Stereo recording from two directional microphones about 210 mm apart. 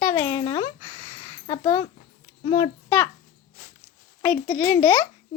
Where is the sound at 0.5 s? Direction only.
20° left (ahead or behind).